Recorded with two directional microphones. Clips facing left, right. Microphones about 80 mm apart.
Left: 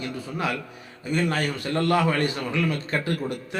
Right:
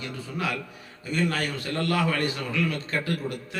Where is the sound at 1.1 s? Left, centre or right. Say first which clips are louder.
Left 2 dB; left.